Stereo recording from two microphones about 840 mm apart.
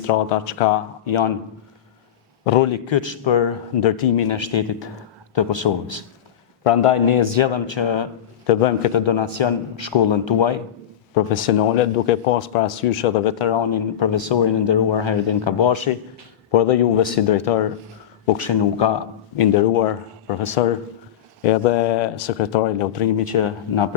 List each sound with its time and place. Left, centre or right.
0.1 s speech: left
2.4 s speech: left
8.4 s speech: left
11.1 s speech: left
19.4 s speech: left
22.1 s speech: left